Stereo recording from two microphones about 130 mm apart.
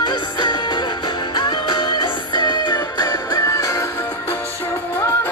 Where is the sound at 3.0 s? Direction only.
20° left (ahead or behind).